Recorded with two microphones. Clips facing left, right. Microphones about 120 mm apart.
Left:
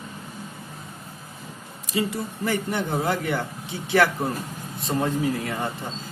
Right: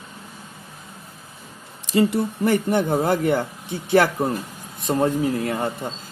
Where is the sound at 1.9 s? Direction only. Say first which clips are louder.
Right 7 dB; 60° right (ahead or behind).